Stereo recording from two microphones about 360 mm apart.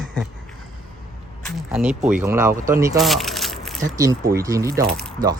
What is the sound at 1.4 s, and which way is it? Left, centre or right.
Speech, centre.